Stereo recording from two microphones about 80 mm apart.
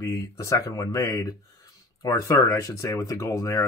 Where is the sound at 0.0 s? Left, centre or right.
Left.